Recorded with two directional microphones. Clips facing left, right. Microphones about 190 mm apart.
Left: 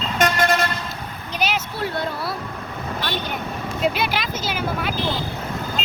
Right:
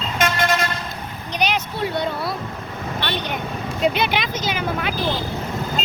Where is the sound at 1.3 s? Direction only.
5° left (ahead or behind).